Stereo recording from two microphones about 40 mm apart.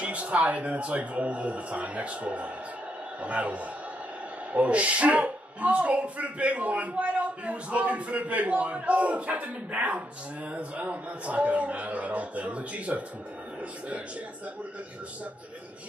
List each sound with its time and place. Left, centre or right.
0.0 s speech: right